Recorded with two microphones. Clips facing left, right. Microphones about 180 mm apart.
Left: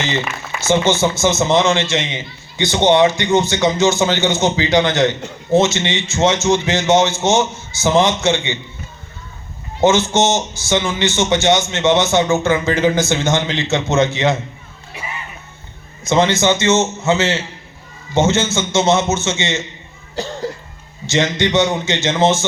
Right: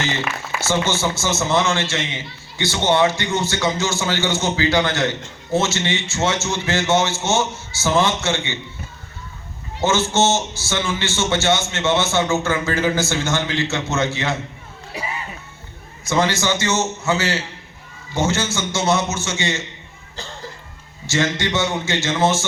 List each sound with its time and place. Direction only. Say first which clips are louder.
0.6 s a man's voice: left 6 dB; 20° left (ahead or behind)
9.8 s a man's voice: left 4 dB; 20° left (ahead or behind)
16.0 s a man's voice: left 5 dB; 20° left (ahead or behind)
21.1 s a man's voice: left 4 dB; 20° left (ahead or behind)